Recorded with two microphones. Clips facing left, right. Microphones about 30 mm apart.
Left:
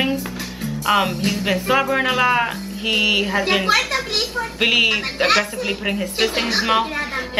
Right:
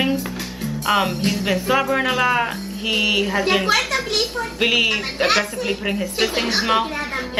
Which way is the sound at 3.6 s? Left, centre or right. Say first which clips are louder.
Left 1 dB; left.